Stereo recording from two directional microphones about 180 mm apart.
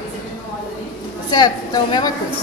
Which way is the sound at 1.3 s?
25° left (ahead or behind).